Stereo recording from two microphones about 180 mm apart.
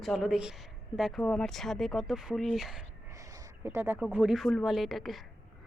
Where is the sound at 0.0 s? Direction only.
Centre (ahead or behind).